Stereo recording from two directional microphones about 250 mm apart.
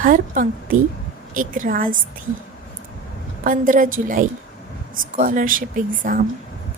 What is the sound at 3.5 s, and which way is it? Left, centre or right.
A woman's voice, right.